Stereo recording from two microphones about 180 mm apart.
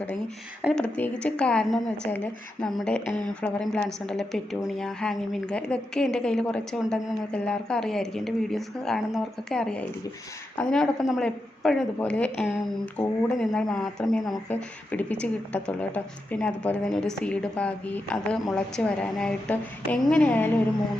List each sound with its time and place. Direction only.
0.6 s a woman's voice: centre (ahead or behind)